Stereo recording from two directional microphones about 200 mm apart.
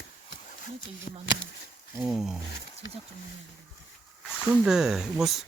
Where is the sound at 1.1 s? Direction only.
30° left (ahead or behind).